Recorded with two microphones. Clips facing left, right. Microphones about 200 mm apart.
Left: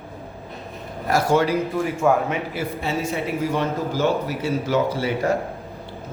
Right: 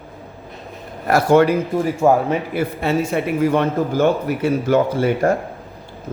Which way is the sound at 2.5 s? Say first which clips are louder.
Right 6 dB; 55° right (ahead or behind).